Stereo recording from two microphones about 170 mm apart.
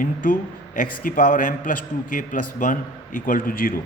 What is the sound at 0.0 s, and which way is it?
A man's voice, 55° left (ahead or behind).